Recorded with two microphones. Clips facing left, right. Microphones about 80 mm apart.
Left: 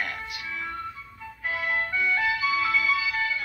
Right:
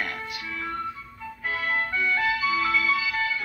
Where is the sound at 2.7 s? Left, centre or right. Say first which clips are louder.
Right 1 dB; centre.